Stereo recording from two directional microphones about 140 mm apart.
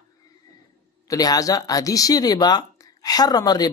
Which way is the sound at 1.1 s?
25° left (ahead or behind).